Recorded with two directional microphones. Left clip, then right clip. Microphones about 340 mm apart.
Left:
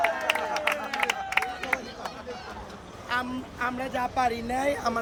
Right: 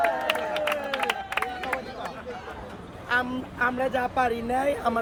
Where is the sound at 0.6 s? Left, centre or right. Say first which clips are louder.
Right 1 dB; centre.